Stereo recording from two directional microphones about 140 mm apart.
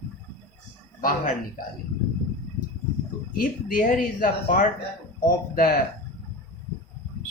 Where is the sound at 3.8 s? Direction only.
80° left.